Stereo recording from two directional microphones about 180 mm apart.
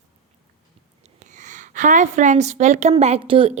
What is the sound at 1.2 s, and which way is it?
A woman's voice, 45° right (ahead or behind).